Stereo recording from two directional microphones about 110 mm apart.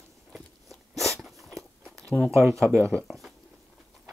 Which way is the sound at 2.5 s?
25° right (ahead or behind).